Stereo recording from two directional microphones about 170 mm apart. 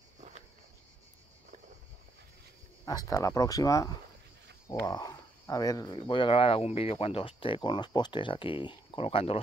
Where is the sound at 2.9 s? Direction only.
20° left (ahead or behind).